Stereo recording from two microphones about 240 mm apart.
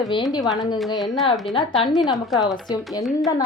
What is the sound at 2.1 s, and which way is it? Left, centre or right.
Speech, centre.